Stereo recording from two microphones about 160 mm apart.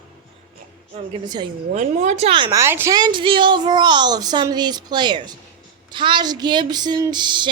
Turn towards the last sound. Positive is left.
turn(degrees=-30)  # may be behind; listen again after turning